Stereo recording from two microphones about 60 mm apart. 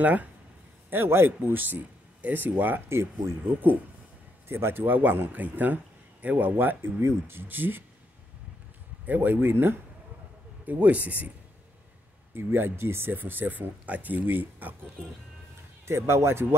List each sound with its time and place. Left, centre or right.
0.0 s speech: right
0.8 s a man's voice: right
4.5 s speech: right
9.0 s speech: right
10.7 s speech: right
12.4 s speech: right
15.8 s speech: right